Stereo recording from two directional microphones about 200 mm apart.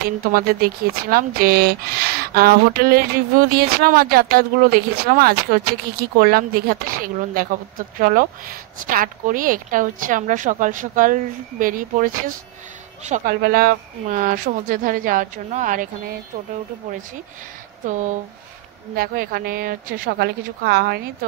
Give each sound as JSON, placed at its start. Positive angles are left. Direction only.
{"t": 0.3, "sound": "a woman's voice", "side_deg": -50}
{"t": 17.8, "sound": "a woman's voice", "side_deg": -40}